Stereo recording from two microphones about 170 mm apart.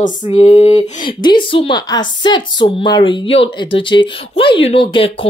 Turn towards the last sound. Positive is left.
turn(degrees=30)  # may be behind; listen again after turning